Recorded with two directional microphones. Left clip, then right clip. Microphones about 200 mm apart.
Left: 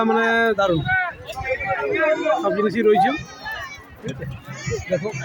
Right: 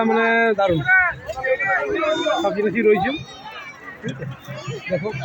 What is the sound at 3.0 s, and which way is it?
Run, 50° left (ahead or behind).